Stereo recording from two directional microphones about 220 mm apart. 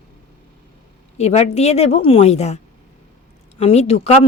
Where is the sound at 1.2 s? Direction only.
30° left (ahead or behind).